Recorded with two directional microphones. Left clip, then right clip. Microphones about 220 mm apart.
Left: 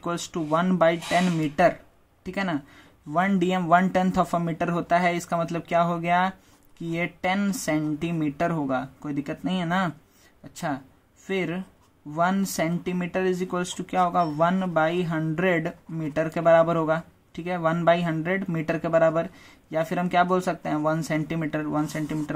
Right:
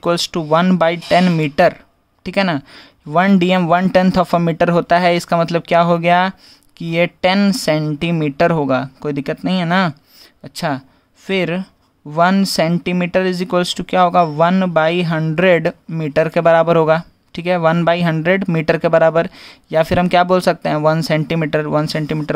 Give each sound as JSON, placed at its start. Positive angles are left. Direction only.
{"t": 0.0, "sound": "speech", "side_deg": -45}
{"t": 11.2, "sound": "speech", "side_deg": -45}